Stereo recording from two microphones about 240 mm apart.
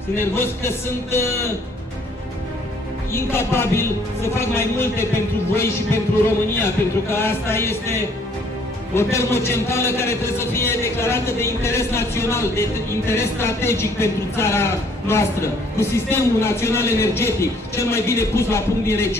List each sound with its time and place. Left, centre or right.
0.1 s a man's voice: centre
3.1 s a man's voice: centre